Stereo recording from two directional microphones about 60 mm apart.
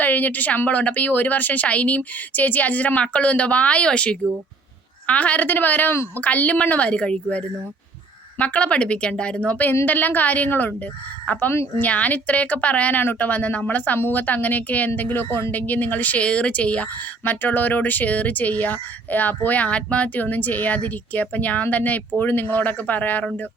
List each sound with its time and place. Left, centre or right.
0.0 s a woman's voice: left
15.5 s a woman's voice: left
17.4 s a woman's voice: left